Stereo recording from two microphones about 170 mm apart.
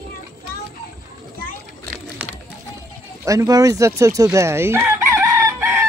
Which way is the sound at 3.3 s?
20° right (ahead or behind).